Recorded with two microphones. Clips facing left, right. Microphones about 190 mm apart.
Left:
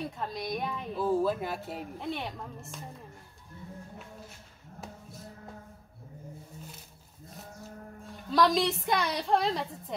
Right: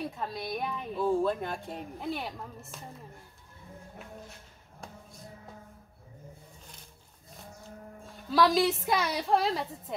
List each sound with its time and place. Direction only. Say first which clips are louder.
0.2 s speech: left 3 dB; centre (ahead or behind)
8.3 s speech: right 1 dB; centre (ahead or behind)